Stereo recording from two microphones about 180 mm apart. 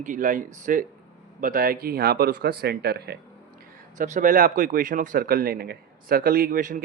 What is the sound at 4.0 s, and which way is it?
Speech, 45° right (ahead or behind).